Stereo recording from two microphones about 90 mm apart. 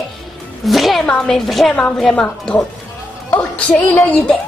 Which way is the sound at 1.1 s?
5° left (ahead or behind).